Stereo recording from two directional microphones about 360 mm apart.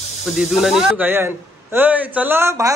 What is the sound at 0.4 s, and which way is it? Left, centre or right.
Speech, centre.